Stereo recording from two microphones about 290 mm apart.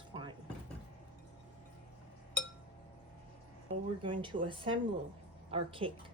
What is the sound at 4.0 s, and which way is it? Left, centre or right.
Speech, centre.